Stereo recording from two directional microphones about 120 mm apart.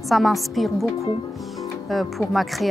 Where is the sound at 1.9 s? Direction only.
Centre (ahead or behind).